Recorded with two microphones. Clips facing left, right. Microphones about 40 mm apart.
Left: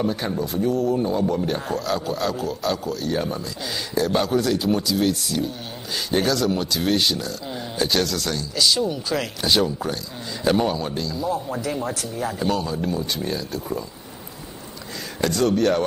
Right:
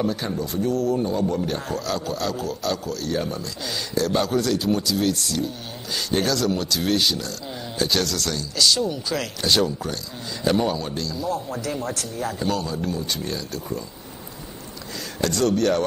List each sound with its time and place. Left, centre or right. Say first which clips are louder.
0.0 s speech: left 1 dB; centre
15.2 s speech: left 1 dB; centre